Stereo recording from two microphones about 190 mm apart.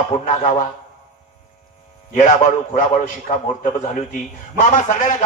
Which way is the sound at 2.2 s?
40° left (ahead or behind).